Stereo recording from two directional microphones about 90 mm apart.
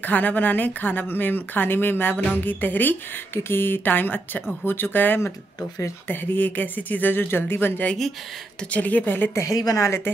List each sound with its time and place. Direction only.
0.0 s speech: 20° left (ahead or behind)
9.4 s a woman's voice: 40° left (ahead or behind)